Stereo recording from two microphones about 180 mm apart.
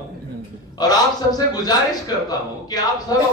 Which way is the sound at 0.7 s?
20° left (ahead or behind).